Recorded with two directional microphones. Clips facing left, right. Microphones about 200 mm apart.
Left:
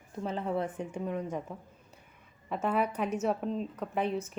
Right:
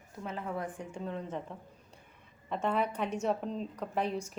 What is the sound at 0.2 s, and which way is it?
A woman's voice, 30° left (ahead or behind).